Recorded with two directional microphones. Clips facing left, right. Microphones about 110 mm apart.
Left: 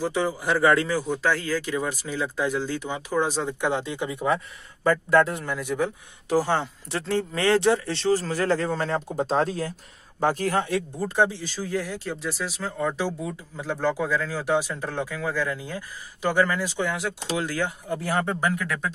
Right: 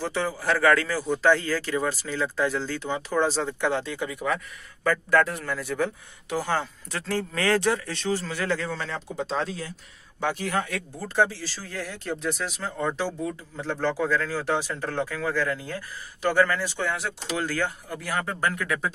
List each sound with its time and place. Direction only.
0.0 s a man's voice: 15° left (ahead or behind)
6.2 s speech: 30° left (ahead or behind)
10.6 s a man's voice: 25° left (ahead or behind)
17.9 s speech: 25° left (ahead or behind)
18.5 s speech: 5° left (ahead or behind)